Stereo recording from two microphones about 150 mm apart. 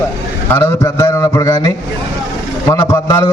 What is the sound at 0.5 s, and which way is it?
A man's voice, 15° left (ahead or behind).